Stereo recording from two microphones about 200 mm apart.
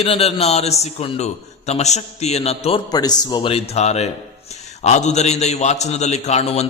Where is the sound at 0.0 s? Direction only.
30° left (ahead or behind).